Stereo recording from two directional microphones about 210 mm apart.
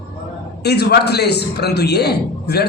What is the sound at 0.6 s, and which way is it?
A man's voice, 50° left (ahead or behind).